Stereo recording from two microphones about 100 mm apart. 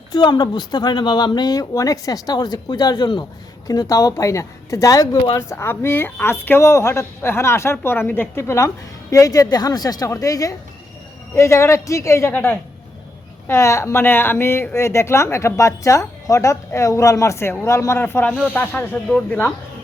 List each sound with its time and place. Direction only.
0.1 s speech: 45° left (ahead or behind)
3.7 s a woman's voice: 35° left (ahead or behind); by 19.5 s 15° left (ahead or behind)